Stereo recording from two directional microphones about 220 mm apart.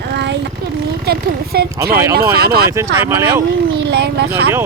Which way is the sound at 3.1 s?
10° right (ahead or behind).